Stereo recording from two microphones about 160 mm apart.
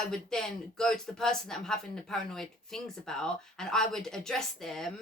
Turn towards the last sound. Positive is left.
turn(degrees=0)  # may be behind; listen again after turning